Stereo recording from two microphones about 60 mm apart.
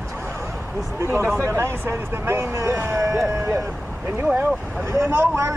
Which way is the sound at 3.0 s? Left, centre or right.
Right.